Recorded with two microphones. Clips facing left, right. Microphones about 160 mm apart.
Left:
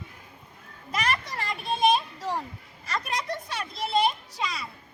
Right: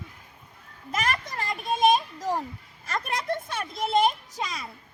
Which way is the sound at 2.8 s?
50° right (ahead or behind).